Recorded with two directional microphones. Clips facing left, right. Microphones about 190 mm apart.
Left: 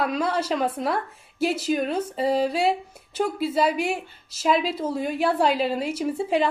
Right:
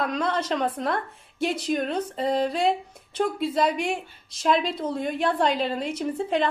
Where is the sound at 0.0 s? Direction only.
5° left (ahead or behind).